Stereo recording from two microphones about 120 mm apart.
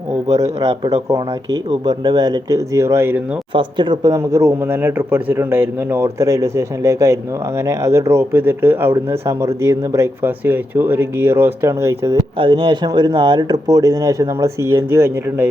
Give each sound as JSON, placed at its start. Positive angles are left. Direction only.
{"t": 0.3, "sound": "speech", "side_deg": -30}
{"t": 3.5, "sound": "speech", "side_deg": -40}
{"t": 4.1, "sound": "speech", "side_deg": -25}
{"t": 12.4, "sound": "speech", "side_deg": -45}